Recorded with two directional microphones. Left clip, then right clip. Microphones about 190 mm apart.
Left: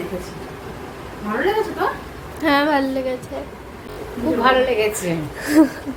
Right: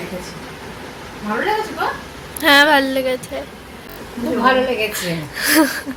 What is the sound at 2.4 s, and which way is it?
Speech, centre (ahead or behind).